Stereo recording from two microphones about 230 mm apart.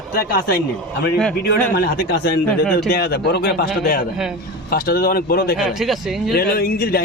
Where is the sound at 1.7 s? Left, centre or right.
Left.